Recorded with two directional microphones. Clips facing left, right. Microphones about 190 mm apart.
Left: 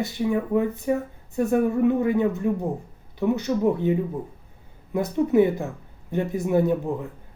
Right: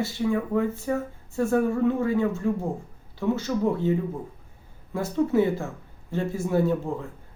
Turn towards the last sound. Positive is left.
turn(degrees=15)  # may be behind; listen again after turning